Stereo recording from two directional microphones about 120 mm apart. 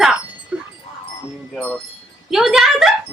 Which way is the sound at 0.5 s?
10° right (ahead or behind).